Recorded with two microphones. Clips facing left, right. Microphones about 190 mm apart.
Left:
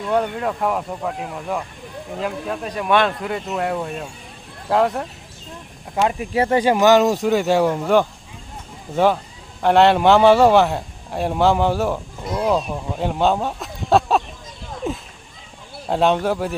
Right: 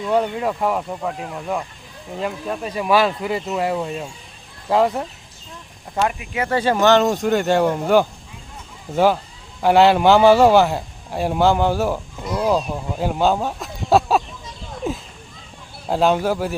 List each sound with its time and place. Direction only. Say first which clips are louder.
0.1 s a man's voice: right 1 dB; 5° right (ahead or behind)
6.1 s speech: left 5 dB; 35° left (ahead or behind)
6.5 s a man's voice: left 1 dB; 15° left (ahead or behind)
9.6 s a man's voice: right 1 dB; 5° right (ahead or behind)
14.8 s a sound: even; centre (ahead or behind)
15.9 s a man's voice: even; centre (ahead or behind)